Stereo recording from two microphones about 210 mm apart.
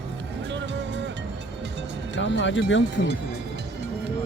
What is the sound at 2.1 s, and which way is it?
Speech, 60° left (ahead or behind).